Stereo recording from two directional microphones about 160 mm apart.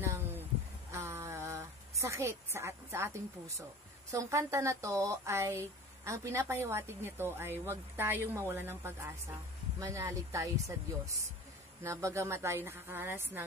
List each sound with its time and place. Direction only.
0.0 s a sound: 15° right (ahead or behind)
4.1 s speech: 20° right (ahead or behind)
11.8 s speech: 15° right (ahead or behind)